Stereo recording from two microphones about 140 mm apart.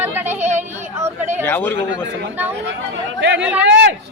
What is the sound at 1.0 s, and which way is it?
Speech, 15° right (ahead or behind).